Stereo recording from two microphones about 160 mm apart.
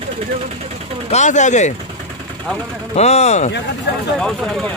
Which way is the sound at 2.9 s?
40° left (ahead or behind).